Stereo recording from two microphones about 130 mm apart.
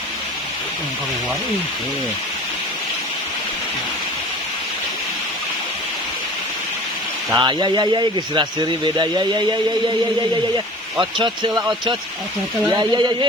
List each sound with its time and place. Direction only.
7.3 s speech: 35° right (ahead or behind)
11.2 s speech: 35° right (ahead or behind)
12.7 s speech: 35° right (ahead or behind)